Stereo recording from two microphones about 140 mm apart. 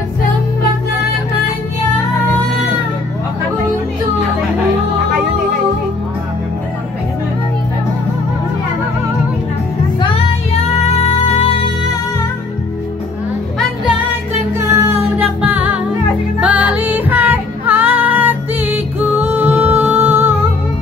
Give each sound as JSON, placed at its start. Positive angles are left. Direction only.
{"t": 11.0, "sound": "music", "side_deg": 50}
{"t": 14.6, "sound": "music", "side_deg": -15}